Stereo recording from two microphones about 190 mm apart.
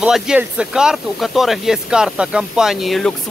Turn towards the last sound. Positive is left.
turn(degrees=0)  # may be behind; listen again after turning